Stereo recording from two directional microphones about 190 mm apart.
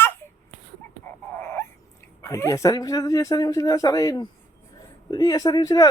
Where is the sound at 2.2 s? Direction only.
15° left (ahead or behind).